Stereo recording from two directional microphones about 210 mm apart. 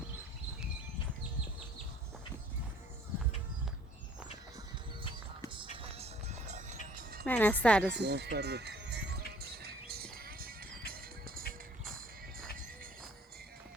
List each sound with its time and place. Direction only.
5.7 s music: 25° right (ahead or behind)
7.3 s a woman's voice: 10° left (ahead or behind)
7.9 s music: 50° right (ahead or behind)